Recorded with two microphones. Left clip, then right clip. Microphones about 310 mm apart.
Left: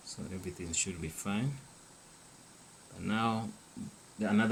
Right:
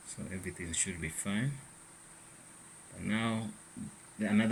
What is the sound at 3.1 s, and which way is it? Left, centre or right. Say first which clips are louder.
Speech: left 3 dB; centre.